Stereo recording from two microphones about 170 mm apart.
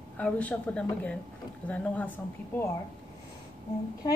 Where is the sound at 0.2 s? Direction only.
10° left (ahead or behind).